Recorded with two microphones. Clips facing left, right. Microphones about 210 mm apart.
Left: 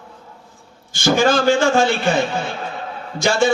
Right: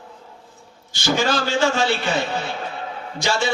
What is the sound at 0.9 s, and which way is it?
A man's voice, 50° left (ahead or behind).